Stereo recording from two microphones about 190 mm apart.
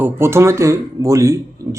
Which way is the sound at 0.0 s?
15° right (ahead or behind).